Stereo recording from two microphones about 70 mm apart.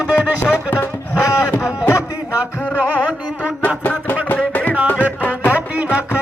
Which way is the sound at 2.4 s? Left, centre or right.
Right.